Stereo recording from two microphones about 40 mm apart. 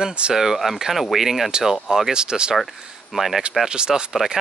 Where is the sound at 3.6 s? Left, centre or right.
Centre.